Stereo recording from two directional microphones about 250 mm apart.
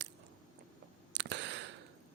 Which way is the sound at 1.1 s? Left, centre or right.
Right.